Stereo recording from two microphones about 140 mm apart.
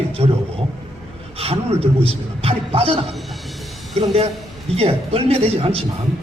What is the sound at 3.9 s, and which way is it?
Speech, 45° right (ahead or behind).